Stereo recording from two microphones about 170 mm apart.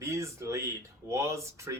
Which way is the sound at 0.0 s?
15° right (ahead or behind).